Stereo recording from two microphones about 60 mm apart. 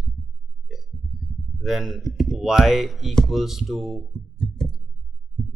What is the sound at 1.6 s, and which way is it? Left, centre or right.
Speech, centre.